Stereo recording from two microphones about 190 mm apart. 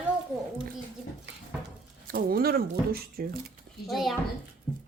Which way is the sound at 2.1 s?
50° right (ahead or behind).